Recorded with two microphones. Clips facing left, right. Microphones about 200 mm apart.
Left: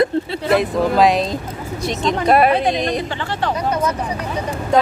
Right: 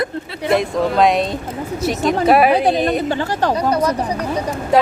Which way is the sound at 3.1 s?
40° right (ahead or behind).